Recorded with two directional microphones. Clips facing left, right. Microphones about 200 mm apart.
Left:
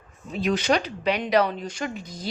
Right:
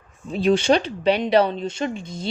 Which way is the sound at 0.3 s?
30° right (ahead or behind).